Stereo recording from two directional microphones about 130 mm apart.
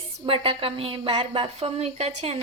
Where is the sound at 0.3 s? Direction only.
45° right (ahead or behind).